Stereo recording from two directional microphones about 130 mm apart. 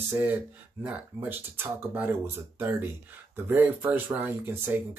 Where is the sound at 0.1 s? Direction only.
15° right (ahead or behind).